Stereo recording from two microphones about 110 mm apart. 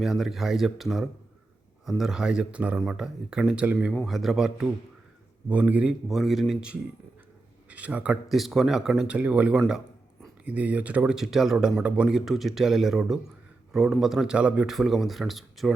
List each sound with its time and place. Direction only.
0.0 s speech: centre (ahead or behind)
6.1 s speech: centre (ahead or behind)